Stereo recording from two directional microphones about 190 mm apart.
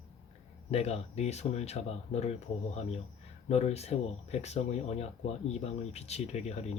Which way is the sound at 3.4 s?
35° left (ahead or behind).